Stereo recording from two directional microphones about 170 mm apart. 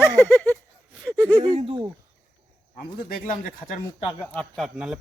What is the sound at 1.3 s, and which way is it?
Speech, 25° right (ahead or behind).